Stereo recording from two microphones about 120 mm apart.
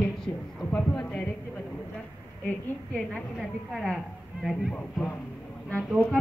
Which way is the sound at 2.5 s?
10° left (ahead or behind).